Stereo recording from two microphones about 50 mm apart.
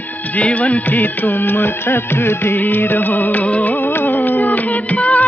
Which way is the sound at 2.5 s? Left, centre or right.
Left.